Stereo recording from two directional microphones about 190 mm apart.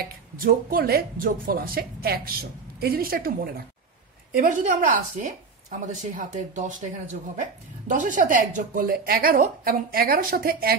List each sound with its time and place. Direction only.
0.4 s a woman's voice: 50° right (ahead or behind)